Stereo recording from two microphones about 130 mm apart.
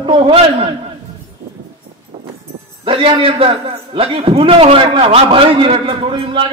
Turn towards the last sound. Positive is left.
turn(degrees=-45)  # may be behind; listen again after turning